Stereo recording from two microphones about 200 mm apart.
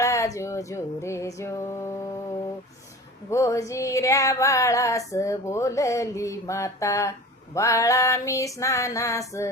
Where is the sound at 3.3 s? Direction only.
15° left (ahead or behind).